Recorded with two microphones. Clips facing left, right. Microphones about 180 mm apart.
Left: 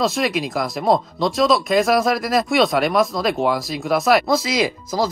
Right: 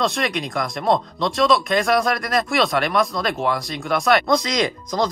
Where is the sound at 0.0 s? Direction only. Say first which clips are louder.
Left 2 dB; centre (ahead or behind).